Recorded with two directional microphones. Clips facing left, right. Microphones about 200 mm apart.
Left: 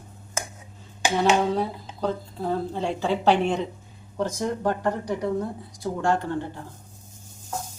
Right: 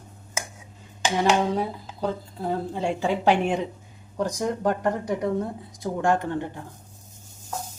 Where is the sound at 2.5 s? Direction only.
10° right (ahead or behind).